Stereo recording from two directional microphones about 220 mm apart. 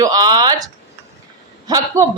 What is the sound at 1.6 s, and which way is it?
Speech, 15° right (ahead or behind).